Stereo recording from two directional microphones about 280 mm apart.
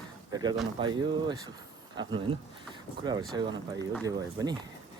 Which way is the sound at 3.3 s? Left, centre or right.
Centre.